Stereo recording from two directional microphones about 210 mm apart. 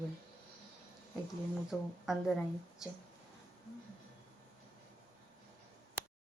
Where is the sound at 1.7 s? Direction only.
Centre (ahead or behind).